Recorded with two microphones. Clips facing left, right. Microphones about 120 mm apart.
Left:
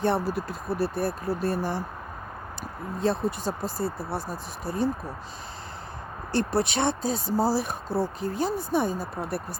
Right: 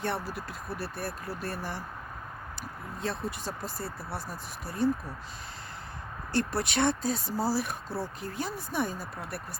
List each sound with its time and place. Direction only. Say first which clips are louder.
0.0 s speech: left 8 dB; 30° left (ahead or behind)
3.0 s speech: left 8 dB; 30° left (ahead or behind)
6.3 s speech: left 4 dB; 25° left (ahead or behind)